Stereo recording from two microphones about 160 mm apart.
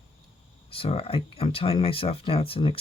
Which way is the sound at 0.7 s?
35° left (ahead or behind).